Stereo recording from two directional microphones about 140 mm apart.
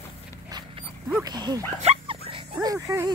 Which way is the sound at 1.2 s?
30° right (ahead or behind).